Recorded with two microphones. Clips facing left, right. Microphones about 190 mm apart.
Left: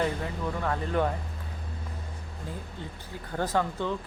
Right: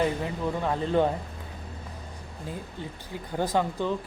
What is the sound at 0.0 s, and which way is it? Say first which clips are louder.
Speech: right 3 dB; 20° right (ahead or behind).